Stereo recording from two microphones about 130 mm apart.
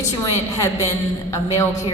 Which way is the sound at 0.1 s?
25° left (ahead or behind).